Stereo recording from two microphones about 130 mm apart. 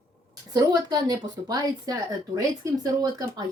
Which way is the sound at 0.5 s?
30° right (ahead or behind).